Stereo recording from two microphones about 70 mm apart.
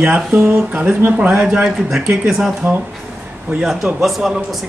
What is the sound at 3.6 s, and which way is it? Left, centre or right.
Speech, centre.